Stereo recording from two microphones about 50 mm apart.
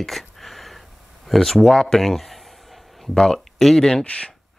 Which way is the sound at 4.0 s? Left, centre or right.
Left.